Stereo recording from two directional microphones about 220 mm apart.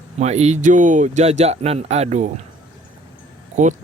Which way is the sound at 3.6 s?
35° right (ahead or behind).